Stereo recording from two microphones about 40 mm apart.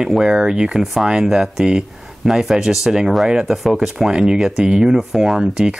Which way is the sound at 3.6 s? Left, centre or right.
Centre.